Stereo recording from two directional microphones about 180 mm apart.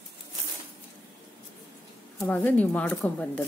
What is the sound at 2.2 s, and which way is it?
Speech, 10° left (ahead or behind).